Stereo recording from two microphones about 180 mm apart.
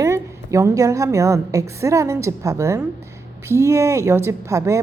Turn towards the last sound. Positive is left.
turn(degrees=-15)  # may be behind; listen again after turning